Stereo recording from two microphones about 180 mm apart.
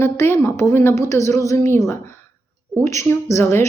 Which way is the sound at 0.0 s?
15° left (ahead or behind).